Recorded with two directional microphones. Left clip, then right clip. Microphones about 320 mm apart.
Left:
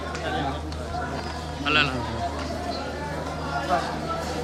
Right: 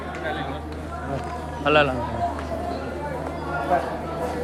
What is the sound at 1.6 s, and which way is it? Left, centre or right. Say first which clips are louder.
Speech: right 4 dB; centre.